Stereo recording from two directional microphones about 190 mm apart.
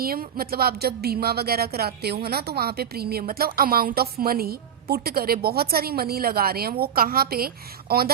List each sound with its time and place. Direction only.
0.0 s a woman's voice: 50° right (ahead or behind)